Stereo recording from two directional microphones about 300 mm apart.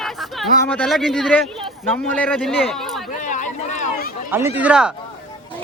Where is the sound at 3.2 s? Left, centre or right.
Left.